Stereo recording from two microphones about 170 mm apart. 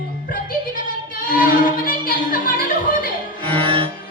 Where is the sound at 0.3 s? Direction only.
55° left (ahead or behind).